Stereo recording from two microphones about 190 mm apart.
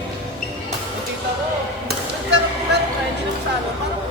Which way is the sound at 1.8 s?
65° right (ahead or behind).